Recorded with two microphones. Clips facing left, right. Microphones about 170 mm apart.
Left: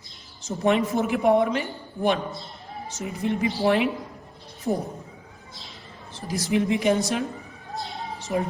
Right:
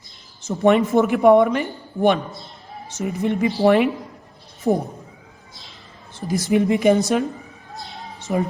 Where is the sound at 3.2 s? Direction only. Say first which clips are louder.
Right 5 dB; 55° right (ahead or behind).